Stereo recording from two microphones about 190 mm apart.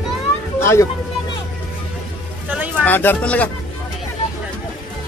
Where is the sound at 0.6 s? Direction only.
15° left (ahead or behind).